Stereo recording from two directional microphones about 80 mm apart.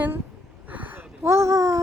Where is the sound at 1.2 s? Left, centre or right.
Right.